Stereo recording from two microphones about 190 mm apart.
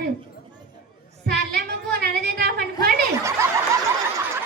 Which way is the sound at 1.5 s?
55° right (ahead or behind).